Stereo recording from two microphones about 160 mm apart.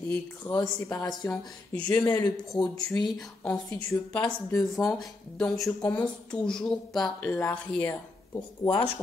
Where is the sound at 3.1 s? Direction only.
5° left (ahead or behind).